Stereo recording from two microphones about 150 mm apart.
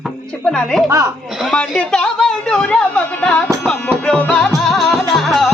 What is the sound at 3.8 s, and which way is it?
Music, 10° left (ahead or behind).